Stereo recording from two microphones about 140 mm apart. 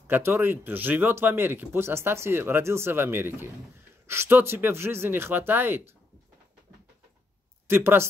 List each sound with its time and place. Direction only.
0.0 s speech: 15° right (ahead or behind)
7.6 s speech: 15° right (ahead or behind)